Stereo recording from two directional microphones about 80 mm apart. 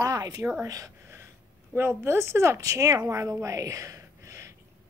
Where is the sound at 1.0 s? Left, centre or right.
Right.